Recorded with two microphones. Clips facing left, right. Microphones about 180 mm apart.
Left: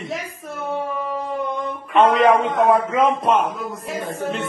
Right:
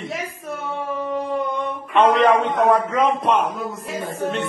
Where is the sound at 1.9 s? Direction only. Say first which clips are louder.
Left 1 dB; centre (ahead or behind).